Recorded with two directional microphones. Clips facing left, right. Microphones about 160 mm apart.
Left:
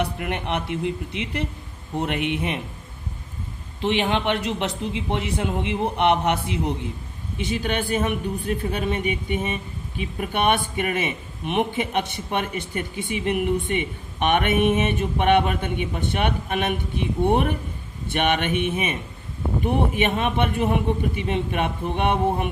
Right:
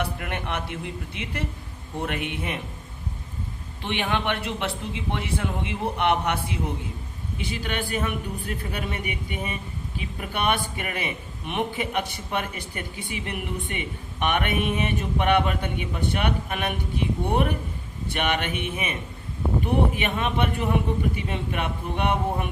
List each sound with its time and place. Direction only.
0.0 s a man's voice: 20° left (ahead or behind)
3.8 s a man's voice: 20° left (ahead or behind)